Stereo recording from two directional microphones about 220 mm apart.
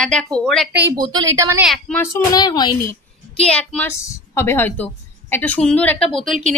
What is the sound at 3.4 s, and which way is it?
A woman's voice, 5° left (ahead or behind).